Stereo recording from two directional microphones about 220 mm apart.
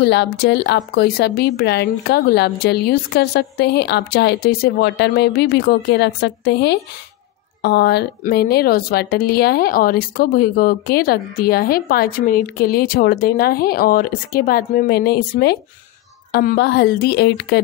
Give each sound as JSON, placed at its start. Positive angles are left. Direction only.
{"t": 0.0, "sound": "a woman's voice", "side_deg": 50}